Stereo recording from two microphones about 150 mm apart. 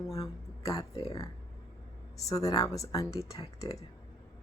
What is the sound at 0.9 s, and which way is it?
Speech, 40° left (ahead or behind).